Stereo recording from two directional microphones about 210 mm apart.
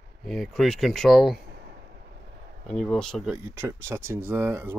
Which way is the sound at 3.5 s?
10° right (ahead or behind).